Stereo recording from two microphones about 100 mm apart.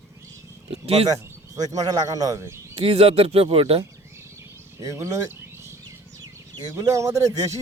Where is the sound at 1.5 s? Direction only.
40° right (ahead or behind).